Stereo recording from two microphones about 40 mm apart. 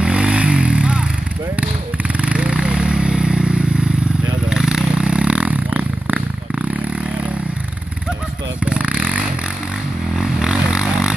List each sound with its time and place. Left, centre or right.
0.0 s vehicle: right
2.1 s vehicle: right
4.5 s a sound: centre; by 6.2 s right
8.6 s vehicle: right
10.1 s vehicle: centre